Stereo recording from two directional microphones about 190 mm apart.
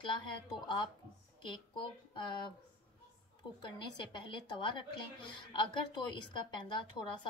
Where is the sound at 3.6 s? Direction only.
25° left (ahead or behind).